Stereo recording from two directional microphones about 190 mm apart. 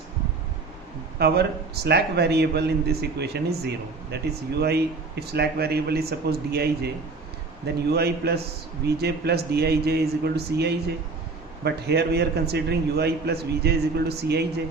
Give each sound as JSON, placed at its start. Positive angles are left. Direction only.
{"t": 1.2, "sound": "a man's voice", "side_deg": -60}